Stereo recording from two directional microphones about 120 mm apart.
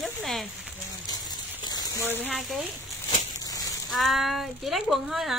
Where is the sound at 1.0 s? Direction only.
35° left (ahead or behind).